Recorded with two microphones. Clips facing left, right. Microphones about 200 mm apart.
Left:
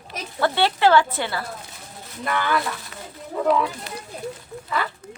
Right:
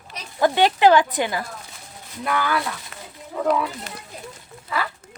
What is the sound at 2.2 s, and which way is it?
Speech, 5° right (ahead or behind).